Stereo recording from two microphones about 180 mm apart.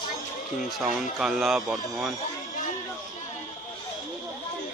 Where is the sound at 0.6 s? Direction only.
Centre (ahead or behind).